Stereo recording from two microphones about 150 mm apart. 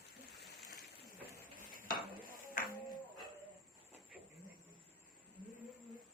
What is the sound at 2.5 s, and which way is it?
Music, 70° left (ahead or behind).